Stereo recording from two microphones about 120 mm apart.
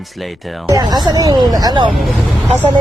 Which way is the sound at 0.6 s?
30° right (ahead or behind).